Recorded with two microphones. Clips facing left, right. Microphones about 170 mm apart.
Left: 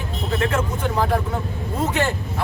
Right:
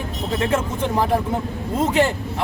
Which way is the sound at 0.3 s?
25° right (ahead or behind).